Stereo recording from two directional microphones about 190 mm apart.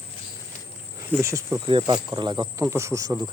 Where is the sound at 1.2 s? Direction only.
15° right (ahead or behind).